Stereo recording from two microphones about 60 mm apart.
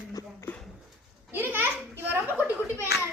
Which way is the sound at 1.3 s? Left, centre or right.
Right.